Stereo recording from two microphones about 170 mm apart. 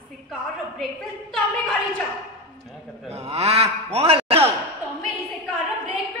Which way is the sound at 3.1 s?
35° right (ahead or behind).